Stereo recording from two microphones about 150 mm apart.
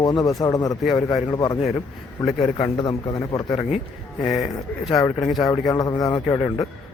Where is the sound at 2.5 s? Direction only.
35° left (ahead or behind).